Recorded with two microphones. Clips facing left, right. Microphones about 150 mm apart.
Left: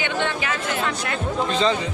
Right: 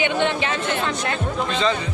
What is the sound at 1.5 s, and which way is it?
Speech, 35° left (ahead or behind).